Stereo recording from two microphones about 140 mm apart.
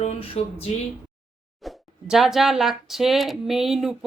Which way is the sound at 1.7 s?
Centre (ahead or behind).